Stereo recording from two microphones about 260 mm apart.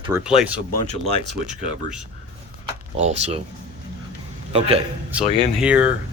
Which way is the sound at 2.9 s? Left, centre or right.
Right.